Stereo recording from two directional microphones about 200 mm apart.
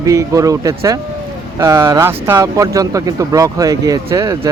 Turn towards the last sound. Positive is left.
turn(degrees=-15)  # may be behind; listen again after turning